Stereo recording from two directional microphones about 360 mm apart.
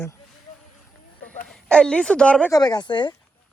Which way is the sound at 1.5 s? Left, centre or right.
Centre.